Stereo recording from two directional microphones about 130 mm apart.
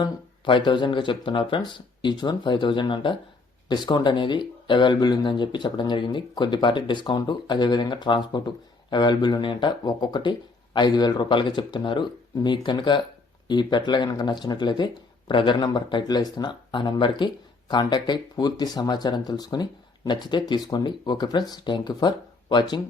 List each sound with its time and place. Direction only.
0.0 s speech: 35° left (ahead or behind)